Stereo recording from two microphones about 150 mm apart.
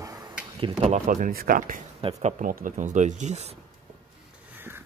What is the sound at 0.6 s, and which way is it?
Speech, 45° right (ahead or behind).